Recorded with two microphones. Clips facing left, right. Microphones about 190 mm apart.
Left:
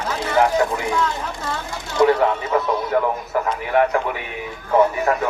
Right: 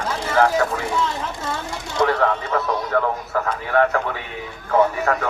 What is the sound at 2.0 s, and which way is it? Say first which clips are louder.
A man's voice: left 3 dB; 15° left (ahead or behind).